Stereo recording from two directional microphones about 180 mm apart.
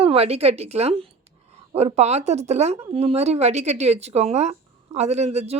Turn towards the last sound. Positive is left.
turn(degrees=-35)  # may be behind; listen again after turning